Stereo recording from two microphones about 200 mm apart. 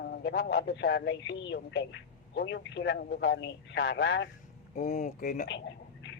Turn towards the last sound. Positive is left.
turn(degrees=40)  # may be behind; listen again after turning